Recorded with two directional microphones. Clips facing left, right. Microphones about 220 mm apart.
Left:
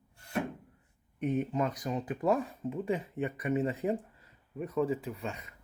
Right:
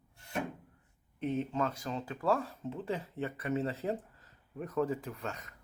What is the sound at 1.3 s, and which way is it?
Speech, 10° left (ahead or behind).